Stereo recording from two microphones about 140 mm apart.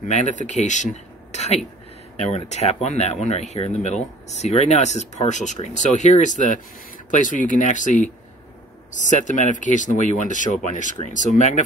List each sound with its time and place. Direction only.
0.1 s speech: 60° left (ahead or behind)
1.3 s a sound: 55° left (ahead or behind)
2.1 s speech: 50° left (ahead or behind)